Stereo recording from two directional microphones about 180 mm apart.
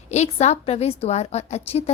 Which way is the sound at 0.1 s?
40° left (ahead or behind).